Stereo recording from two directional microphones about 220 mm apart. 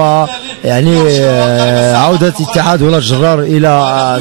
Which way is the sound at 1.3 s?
20° right (ahead or behind).